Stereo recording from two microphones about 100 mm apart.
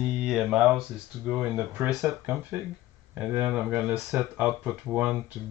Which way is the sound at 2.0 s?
30° right (ahead or behind).